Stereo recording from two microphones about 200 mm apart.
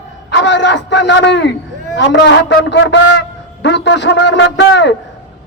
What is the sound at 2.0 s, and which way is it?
A man's voice, 60° left (ahead or behind).